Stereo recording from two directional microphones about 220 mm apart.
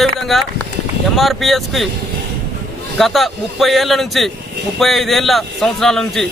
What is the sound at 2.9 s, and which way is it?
A man's voice, centre (ahead or behind).